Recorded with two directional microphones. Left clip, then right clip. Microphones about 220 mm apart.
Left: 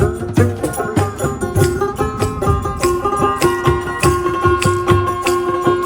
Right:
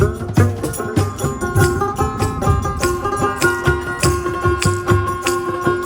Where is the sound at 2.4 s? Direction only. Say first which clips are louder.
Left 2 dB; 20° right (ahead or behind).